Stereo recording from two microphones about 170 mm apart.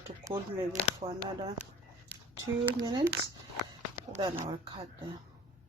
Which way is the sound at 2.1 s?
20° right (ahead or behind).